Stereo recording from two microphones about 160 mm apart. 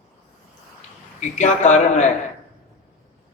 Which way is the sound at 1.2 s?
50° left (ahead or behind).